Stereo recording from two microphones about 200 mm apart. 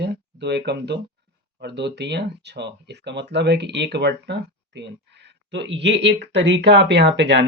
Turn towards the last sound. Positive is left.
turn(degrees=-60)  # may be behind; listen again after turning